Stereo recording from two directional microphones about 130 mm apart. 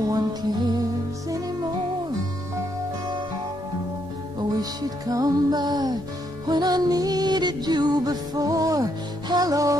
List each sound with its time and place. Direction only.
0.1 s music: 30° right (ahead or behind)
4.4 s music: 30° right (ahead or behind)